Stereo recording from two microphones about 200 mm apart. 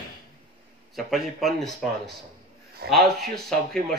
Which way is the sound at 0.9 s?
Centre (ahead or behind).